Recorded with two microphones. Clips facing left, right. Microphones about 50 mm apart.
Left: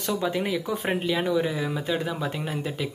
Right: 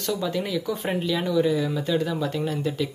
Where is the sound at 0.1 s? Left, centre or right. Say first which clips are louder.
Even; left.